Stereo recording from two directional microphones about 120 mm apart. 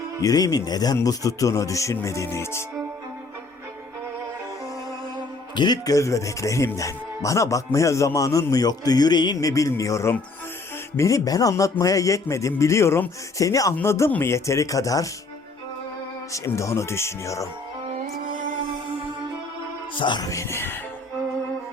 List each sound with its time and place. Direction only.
0.2 s speech: 30° left (ahead or behind)
5.5 s speech: 35° left (ahead or behind)
16.3 s speech: 25° left (ahead or behind)
20.0 s speech: 40° left (ahead or behind); by 20.7 s 20° left (ahead or behind)